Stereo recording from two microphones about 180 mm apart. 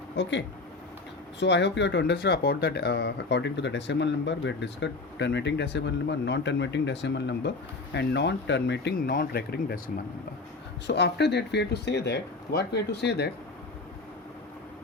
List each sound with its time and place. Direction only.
0.2 s speech: 80° left; by 9.9 s 55° left (ahead or behind)
10.8 s speech: 70° left (ahead or behind)